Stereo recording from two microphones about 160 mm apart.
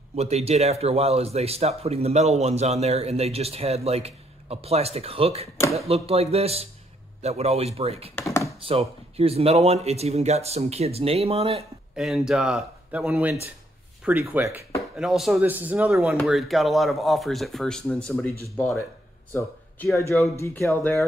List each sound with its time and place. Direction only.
0.1 s a man's voice: 40° right (ahead or behind)
8.2 s computer keyboard: 15° left (ahead or behind)
8.5 s a man's voice: 35° right (ahead or behind)
11.9 s speech: 5° right (ahead or behind)
15.0 s speech: centre (ahead or behind)
19.3 s speech: 15° left (ahead or behind)